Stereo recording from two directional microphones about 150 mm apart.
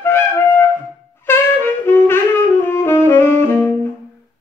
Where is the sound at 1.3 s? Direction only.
15° left (ahead or behind).